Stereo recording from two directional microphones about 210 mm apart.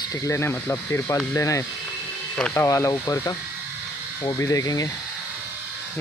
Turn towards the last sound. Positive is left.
turn(degrees=20)  # may be behind; listen again after turning